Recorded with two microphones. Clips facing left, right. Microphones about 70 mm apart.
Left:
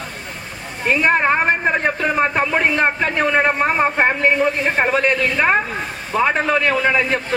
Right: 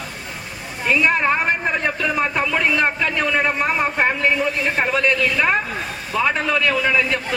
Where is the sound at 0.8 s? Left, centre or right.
Left.